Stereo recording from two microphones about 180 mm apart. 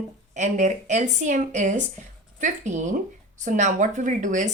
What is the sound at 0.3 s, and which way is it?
A woman's voice, 40° right (ahead or behind).